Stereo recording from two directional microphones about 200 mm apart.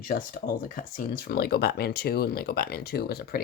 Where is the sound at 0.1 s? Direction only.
45° left (ahead or behind).